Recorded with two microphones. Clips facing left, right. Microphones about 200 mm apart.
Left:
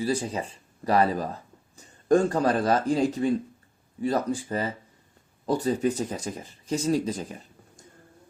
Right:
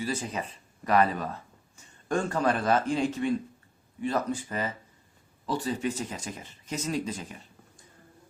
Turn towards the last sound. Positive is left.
turn(degrees=40)  # may be behind; listen again after turning